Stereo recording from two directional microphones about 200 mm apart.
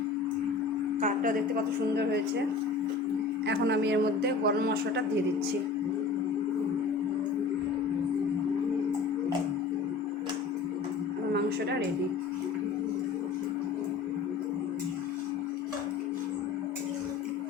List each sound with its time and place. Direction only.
1.0 s a woman's voice: 40° right (ahead or behind)
3.4 s a man's voice: 60° right (ahead or behind)